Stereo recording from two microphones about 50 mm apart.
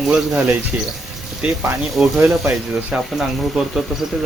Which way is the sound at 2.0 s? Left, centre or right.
Centre.